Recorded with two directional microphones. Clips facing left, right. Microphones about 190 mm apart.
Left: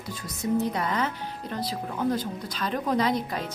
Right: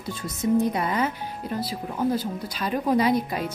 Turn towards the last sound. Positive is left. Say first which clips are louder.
# right 4 dB
turn(degrees=-10)  # may be behind; listen again after turning